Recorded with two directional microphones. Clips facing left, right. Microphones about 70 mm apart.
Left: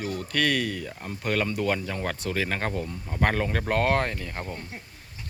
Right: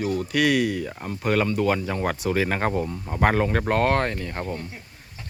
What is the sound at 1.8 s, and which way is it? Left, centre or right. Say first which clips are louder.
Speech: right 5 dB; centre.